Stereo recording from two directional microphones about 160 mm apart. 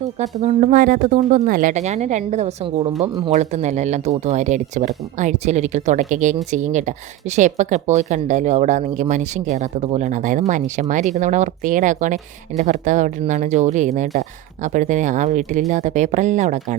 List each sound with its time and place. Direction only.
0.2 s speech: 45° right (ahead or behind)